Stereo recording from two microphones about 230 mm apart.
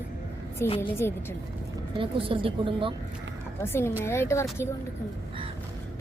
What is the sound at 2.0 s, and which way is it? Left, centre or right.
Speech, right.